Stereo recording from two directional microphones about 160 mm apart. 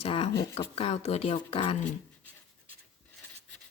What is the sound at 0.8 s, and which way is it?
Speech, 40° left (ahead or behind).